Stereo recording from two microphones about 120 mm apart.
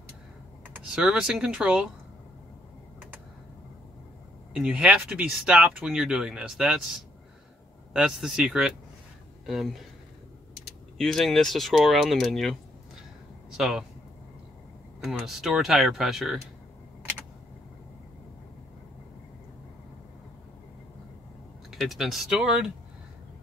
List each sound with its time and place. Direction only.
0.9 s speech: 5° right (ahead or behind)
4.6 s speech: 5° right (ahead or behind)
7.9 s speech: 5° right (ahead or behind)
11.0 s speech: 5° left (ahead or behind)
15.0 s speech: centre (ahead or behind)
21.6 s speech: centre (ahead or behind)